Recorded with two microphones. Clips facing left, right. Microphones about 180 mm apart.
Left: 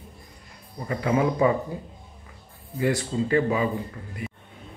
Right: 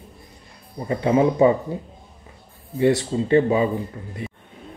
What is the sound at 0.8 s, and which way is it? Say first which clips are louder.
Speech: right 5 dB; 25° right (ahead or behind).